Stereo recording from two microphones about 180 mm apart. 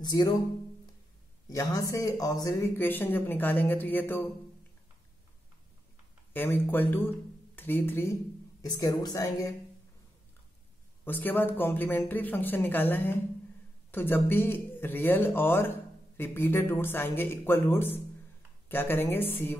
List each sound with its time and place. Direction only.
0.0 s speech: 20° left (ahead or behind)
1.5 s speech: 20° left (ahead or behind)
6.3 s speech: 10° left (ahead or behind)
11.1 s speech: 10° left (ahead or behind)